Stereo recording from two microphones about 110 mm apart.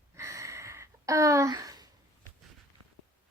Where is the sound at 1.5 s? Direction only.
35° right (ahead or behind).